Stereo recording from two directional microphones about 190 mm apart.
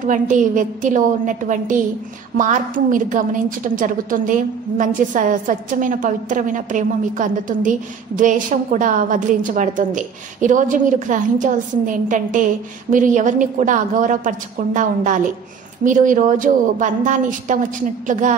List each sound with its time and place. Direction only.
0.0 s a woman's voice: 45° right (ahead or behind)